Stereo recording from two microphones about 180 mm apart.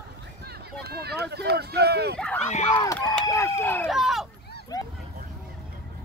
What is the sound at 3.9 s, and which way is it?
Speech, centre (ahead or behind).